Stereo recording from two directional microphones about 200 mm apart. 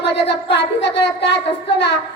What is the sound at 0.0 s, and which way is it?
A woman's voice, 60° left (ahead or behind).